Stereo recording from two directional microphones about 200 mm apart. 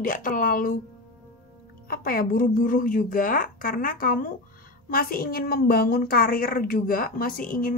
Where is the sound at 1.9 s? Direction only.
45° left (ahead or behind).